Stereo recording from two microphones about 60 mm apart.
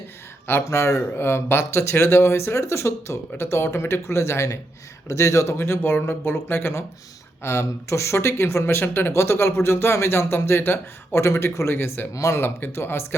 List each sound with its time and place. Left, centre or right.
0.4 s speech: left
7.4 s speech: left
12.1 s speech: left